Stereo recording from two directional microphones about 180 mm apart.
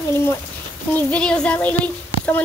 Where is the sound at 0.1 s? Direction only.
15° left (ahead or behind).